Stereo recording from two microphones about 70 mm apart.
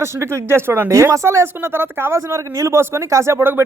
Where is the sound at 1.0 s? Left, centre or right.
Right.